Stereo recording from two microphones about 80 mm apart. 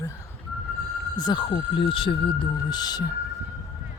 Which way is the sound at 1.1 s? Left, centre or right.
Left.